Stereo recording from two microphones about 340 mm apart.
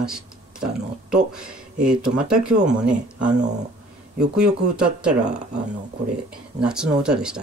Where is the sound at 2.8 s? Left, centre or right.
Right.